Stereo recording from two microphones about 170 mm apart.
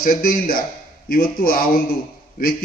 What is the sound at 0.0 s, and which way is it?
A man's voice, 55° left (ahead or behind).